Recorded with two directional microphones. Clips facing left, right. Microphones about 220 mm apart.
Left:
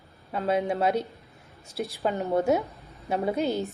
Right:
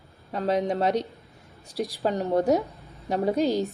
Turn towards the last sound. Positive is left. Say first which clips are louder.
# right 3 dB
turn(degrees=-35)  # may be behind; listen again after turning